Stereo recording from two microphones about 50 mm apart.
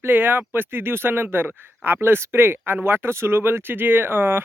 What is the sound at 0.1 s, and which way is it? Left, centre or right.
Speech, right.